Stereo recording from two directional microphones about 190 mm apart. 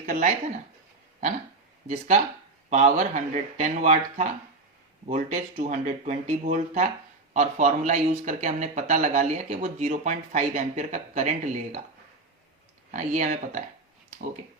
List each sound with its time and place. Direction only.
0.0 s speech: 40° right (ahead or behind)
2.6 s speech: 35° right (ahead or behind)
12.9 s speech: 40° right (ahead or behind)